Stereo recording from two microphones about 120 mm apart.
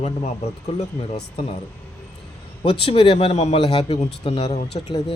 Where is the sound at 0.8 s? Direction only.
65° left (ahead or behind).